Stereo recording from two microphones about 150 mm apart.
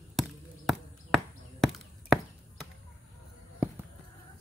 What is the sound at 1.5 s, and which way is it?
Chop, centre (ahead or behind).